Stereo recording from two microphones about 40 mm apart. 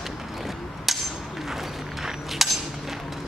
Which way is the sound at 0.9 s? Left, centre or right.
Centre.